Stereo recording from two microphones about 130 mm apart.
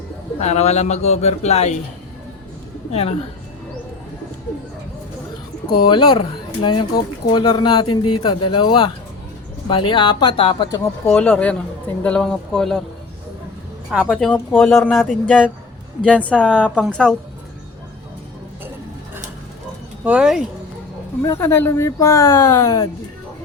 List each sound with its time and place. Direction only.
0.3 s a man's voice: 60° left (ahead or behind)
2.9 s speech: 50° left (ahead or behind)
5.8 s a man's voice: 40° left (ahead or behind)
10.7 s speech: 10° left (ahead or behind)
13.9 s speech: centre (ahead or behind)
16.0 s speech: 10° left (ahead or behind)
16.5 s speech: 10° right (ahead or behind)
16.9 s speech: 5° left (ahead or behind)
20.1 s speech: 5° right (ahead or behind)
21.2 s speech: 20° left (ahead or behind)